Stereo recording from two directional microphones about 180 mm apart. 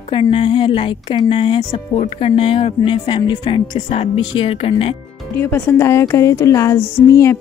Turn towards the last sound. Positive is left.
turn(degrees=15)  # may be behind; listen again after turning